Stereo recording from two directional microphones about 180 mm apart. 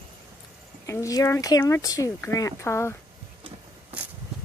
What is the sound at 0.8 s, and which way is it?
Speech, 15° left (ahead or behind).